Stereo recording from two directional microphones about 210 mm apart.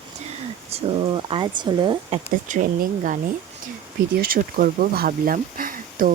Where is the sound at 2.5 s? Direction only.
35° right (ahead or behind).